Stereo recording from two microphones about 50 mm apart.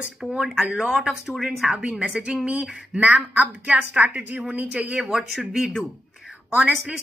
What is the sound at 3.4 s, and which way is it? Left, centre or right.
Speech, right.